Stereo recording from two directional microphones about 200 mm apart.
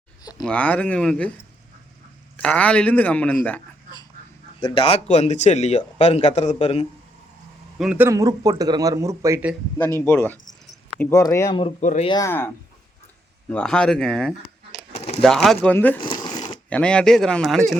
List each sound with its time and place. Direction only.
0.2 s a sound: 20° left (ahead or behind)
0.4 s a man's voice: 5° left (ahead or behind)
2.3 s a man's voice: 5° left (ahead or behind)
4.6 s speech: 25° left (ahead or behind)
7.8 s speech: 5° right (ahead or behind)
10.0 s a man's voice: 10° left (ahead or behind)
11.6 s speech: 35° left (ahead or behind)
12.0 s a man's voice: 15° left (ahead or behind)
13.5 s speech: 5° left (ahead or behind)
14.9 s a sound: 30° left (ahead or behind)
15.2 s speech: centre (ahead or behind)
16.0 s a sound: 25° left (ahead or behind)
16.6 s speech: 5° left (ahead or behind)